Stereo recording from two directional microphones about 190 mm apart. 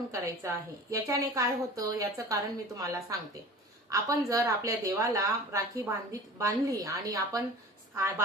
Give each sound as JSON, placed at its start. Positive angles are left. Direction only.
{"t": 0.1, "sound": "speech", "side_deg": -15}